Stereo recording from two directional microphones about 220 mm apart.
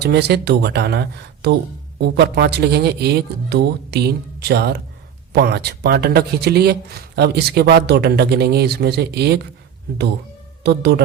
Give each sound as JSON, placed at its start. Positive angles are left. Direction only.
{"t": 0.0, "sound": "speech", "side_deg": -50}
{"t": 10.6, "sound": "speech", "side_deg": -50}